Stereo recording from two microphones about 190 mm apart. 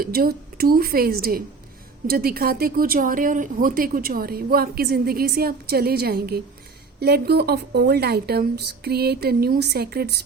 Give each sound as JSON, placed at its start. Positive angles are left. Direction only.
{"t": 0.0, "sound": "a woman's voice", "side_deg": -50}